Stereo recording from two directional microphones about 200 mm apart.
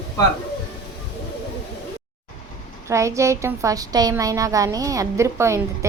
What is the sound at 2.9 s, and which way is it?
A woman's voice, 15° right (ahead or behind).